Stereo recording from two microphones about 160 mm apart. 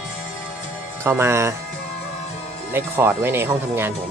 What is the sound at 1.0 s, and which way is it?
Speech, 15° right (ahead or behind).